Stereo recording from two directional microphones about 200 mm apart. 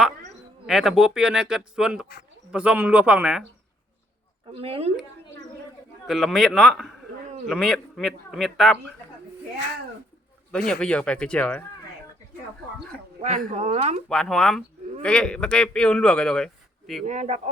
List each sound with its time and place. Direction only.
0.7 s a man's voice: centre (ahead or behind)
4.4 s speech: 30° right (ahead or behind)
6.1 s speech: centre (ahead or behind)
10.7 s speech: 5° left (ahead or behind)
13.2 s speech: 35° right (ahead or behind)
14.1 s speech: centre (ahead or behind)
17.1 s speech: 35° right (ahead or behind)